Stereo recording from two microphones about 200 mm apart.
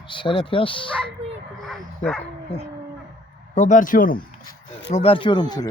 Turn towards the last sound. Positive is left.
turn(degrees=20)  # may be behind; listen again after turning